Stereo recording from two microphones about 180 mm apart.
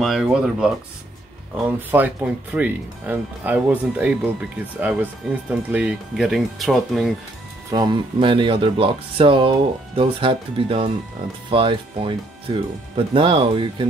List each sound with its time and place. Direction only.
0.0 s speech: centre (ahead or behind)
7.7 s speech: 25° right (ahead or behind)